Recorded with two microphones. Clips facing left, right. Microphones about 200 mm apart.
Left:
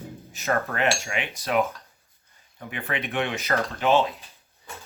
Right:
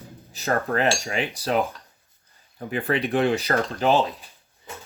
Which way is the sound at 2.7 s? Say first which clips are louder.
Right 6 dB; 35° right (ahead or behind).